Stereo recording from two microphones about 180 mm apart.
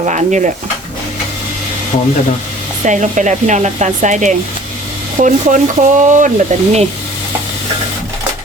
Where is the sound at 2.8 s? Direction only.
45° right (ahead or behind).